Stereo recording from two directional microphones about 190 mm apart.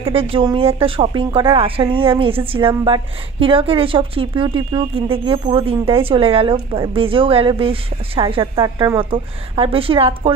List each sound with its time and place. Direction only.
0.0 s a woman's voice: 30° right (ahead or behind)